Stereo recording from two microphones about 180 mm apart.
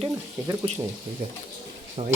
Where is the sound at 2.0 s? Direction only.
35° right (ahead or behind).